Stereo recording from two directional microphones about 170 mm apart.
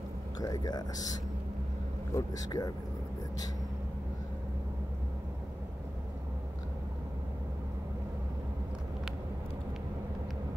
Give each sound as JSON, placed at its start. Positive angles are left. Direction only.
{"t": 0.4, "sound": "speech", "side_deg": 25}
{"t": 2.1, "sound": "speech", "side_deg": 20}